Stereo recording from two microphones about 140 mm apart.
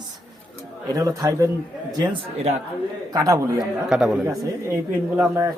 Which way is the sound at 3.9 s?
5° right (ahead or behind).